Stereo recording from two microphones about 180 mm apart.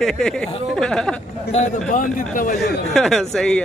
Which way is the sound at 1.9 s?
50° left (ahead or behind).